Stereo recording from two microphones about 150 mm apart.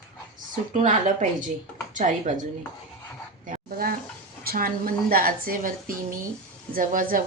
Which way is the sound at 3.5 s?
75° right (ahead or behind).